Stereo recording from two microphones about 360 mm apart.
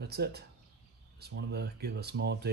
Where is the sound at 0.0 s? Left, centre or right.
Right.